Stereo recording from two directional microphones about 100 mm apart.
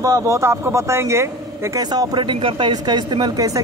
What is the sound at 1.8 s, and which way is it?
Speech, 40° right (ahead or behind).